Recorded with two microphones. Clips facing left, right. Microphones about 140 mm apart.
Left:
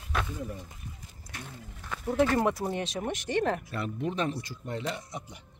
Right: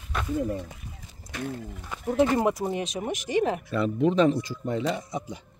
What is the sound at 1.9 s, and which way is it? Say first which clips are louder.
Speech: right 3 dB; 15° right (ahead or behind).